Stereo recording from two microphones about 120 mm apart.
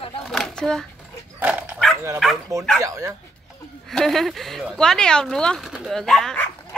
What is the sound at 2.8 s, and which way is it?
Speech, 25° right (ahead or behind).